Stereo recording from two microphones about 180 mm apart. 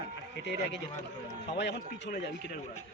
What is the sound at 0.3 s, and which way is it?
Speech, 75° left (ahead or behind).